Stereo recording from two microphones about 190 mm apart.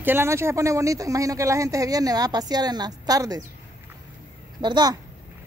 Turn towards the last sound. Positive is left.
turn(degrees=-20)  # may be behind; listen again after turning